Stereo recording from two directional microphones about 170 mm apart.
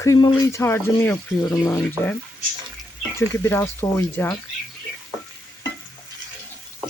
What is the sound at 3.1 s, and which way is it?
Speech, 15° left (ahead or behind).